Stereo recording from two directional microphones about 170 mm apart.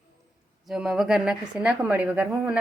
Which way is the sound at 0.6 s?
5° right (ahead or behind).